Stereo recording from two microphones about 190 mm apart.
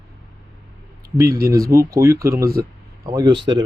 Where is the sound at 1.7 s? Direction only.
15° right (ahead or behind).